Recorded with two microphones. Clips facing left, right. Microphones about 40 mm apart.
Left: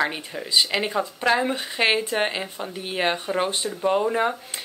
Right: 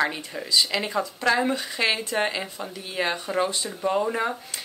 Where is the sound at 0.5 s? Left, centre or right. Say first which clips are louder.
Left 2 dB; left.